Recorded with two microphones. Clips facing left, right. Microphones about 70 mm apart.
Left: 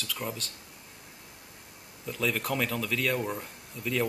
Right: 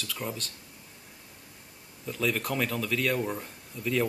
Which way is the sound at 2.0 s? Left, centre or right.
Centre.